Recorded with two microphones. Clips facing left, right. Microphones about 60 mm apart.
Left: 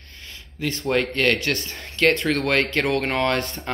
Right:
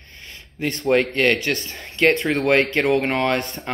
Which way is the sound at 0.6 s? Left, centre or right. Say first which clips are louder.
Right 2 dB; right.